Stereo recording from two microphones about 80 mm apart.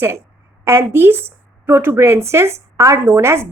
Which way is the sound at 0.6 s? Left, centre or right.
Right.